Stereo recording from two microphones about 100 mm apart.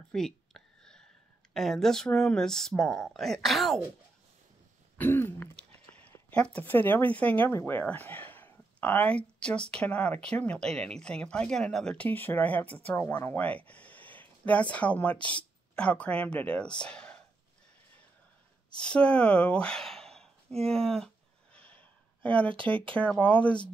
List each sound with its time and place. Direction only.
0.1 s a sound: 5° left (ahead or behind)
1.5 s speech: 5° left (ahead or behind)
4.9 s throat clearing: 20° left (ahead or behind)
5.6 s a sound: 15° left (ahead or behind)
6.3 s speech: 10° left (ahead or behind)
18.7 s speech: 10° left (ahead or behind)
21.5 s snort: 15° left (ahead or behind)
22.8 s speech: 10° left (ahead or behind)